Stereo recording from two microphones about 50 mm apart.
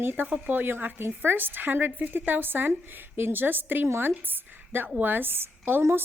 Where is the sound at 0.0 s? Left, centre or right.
Right.